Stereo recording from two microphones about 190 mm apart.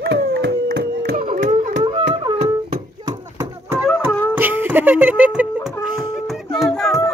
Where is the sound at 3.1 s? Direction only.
20° right (ahead or behind); by 7.0 s centre (ahead or behind).